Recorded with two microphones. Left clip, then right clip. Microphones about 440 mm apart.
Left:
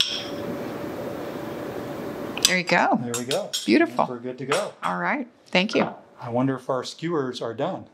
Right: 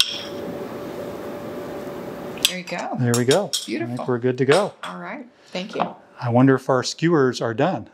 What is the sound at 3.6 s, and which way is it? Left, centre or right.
Cutlery, left.